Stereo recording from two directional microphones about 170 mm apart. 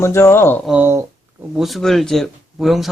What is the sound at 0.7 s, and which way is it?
Speech, 10° right (ahead or behind).